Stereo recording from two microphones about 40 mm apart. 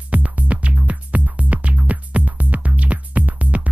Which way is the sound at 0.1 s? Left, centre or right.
Right.